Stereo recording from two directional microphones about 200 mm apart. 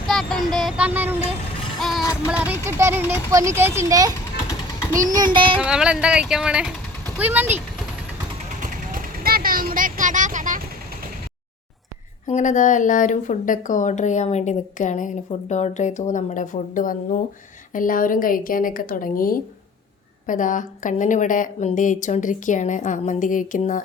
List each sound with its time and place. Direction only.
0.1 s child singing: centre (ahead or behind)
1.8 s music: centre (ahead or behind)
2.2 s speech: 5° right (ahead or behind)
5.0 s child singing: 20° right (ahead or behind)
5.5 s speech: 5° right (ahead or behind)
8.6 s vehicle: 45° right (ahead or behind)
12.3 s a woman's voice: 40° left (ahead or behind)